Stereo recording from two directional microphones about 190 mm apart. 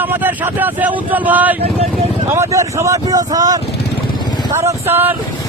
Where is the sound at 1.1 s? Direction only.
10° right (ahead or behind).